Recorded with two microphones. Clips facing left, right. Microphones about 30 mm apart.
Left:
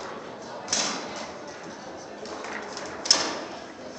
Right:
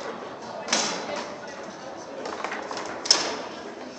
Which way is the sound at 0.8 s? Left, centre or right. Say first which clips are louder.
Right 1 dB; centre.